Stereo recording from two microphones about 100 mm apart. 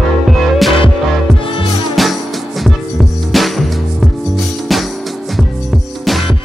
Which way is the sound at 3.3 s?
Centre (ahead or behind).